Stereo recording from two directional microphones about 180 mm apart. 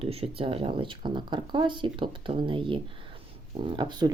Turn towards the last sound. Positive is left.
turn(degrees=-25)  # may be behind; listen again after turning